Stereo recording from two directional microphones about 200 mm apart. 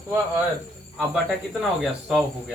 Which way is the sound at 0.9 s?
5° right (ahead or behind).